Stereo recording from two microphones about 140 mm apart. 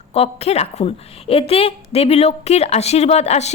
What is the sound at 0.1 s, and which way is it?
A woman's voice, 45° left (ahead or behind).